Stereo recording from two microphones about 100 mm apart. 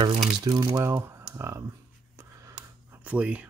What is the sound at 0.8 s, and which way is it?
Speech, 25° right (ahead or behind).